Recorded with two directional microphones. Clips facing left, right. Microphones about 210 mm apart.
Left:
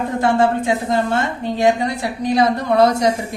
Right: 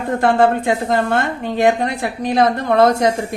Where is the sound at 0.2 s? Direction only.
60° right (ahead or behind).